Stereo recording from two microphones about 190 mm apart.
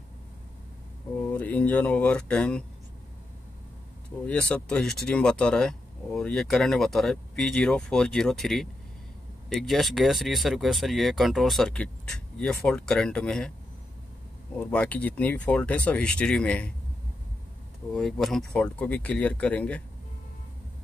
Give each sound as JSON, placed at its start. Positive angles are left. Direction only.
{"t": 1.2, "sound": "speech", "side_deg": 10}
{"t": 4.3, "sound": "speech", "side_deg": 5}
{"t": 14.5, "sound": "speech", "side_deg": 5}
{"t": 17.9, "sound": "speech", "side_deg": 5}